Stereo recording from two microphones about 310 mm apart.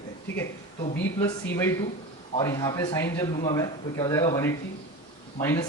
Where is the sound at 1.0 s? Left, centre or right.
Centre.